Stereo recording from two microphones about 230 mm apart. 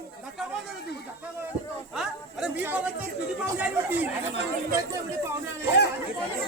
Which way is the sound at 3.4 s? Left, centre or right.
Centre.